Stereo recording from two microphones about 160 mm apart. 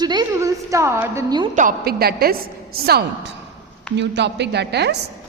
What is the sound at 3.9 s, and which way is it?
A woman's voice, 90° right.